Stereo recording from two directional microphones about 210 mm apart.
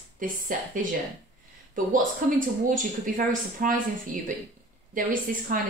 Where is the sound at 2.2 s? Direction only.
40° right (ahead or behind).